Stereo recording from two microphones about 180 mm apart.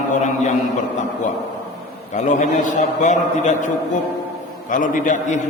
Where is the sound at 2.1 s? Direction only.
40° left (ahead or behind).